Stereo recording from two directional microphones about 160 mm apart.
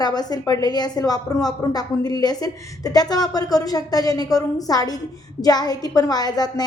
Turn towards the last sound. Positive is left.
turn(degrees=25)  # may be behind; listen again after turning